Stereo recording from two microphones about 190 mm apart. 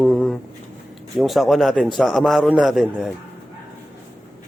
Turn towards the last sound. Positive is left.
turn(degrees=0)  # may be behind; listen again after turning